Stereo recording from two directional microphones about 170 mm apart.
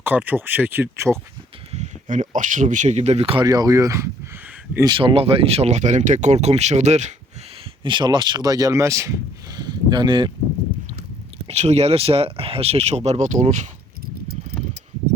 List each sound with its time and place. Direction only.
0.0 s speech: 10° right (ahead or behind)
1.7 s speech: 45° right (ahead or behind)
3.4 s speech: 20° right (ahead or behind)
4.9 s speech: 30° right (ahead or behind)
7.9 s speech: 25° right (ahead or behind)
11.4 s speech: 40° right (ahead or behind)